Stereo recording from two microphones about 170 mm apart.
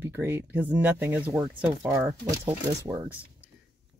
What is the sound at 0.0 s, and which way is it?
Speech, 15° right (ahead or behind).